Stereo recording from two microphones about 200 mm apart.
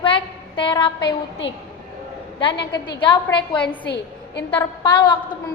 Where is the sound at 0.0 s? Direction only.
25° left (ahead or behind).